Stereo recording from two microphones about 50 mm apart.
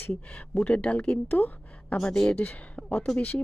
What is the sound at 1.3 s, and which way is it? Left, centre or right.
Speech, left.